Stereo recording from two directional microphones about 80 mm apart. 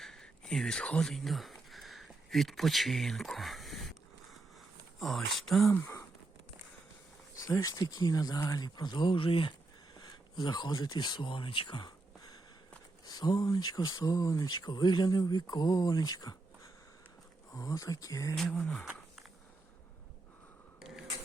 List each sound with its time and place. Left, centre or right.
0.0 s speech: centre
1.7 s a sound: centre
4.9 s speech: centre
5.7 s a sound: left
7.3 s speech: left
8.5 s speech: left
10.0 s speech: left
11.9 s a sound: left
13.1 s speech: left
14.0 s speech: left
14.4 s speech: left
17.5 s speech: left
18.3 s speech: centre
20.7 s a sound: centre